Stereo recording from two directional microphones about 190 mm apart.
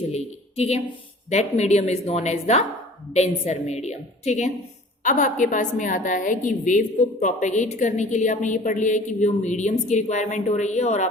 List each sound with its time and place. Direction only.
0.1 s a woman's voice: 35° left (ahead or behind)